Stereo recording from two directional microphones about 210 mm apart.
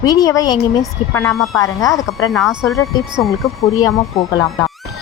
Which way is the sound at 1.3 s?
Centre (ahead or behind).